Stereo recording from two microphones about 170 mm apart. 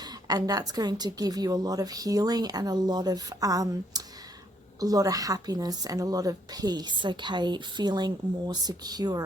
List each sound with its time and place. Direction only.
0.0 s a woman's voice: 25° right (ahead or behind)